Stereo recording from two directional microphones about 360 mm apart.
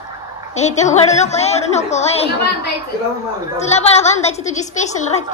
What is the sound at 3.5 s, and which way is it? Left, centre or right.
A woman's voice, centre.